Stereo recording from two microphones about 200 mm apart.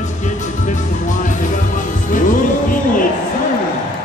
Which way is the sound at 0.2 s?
40° left (ahead or behind).